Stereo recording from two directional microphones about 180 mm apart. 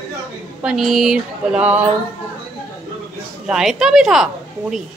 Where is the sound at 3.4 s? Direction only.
5° right (ahead or behind).